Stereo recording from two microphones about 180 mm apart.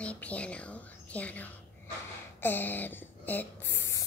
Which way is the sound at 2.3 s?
10° left (ahead or behind).